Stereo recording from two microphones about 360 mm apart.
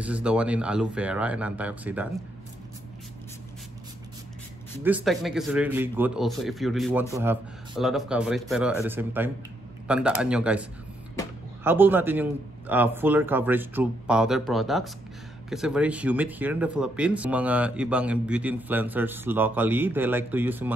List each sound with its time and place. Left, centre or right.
0.0 s speech: centre
4.8 s speech: centre